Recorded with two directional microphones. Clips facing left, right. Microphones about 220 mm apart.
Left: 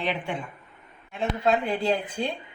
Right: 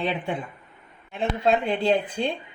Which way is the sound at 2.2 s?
25° right (ahead or behind).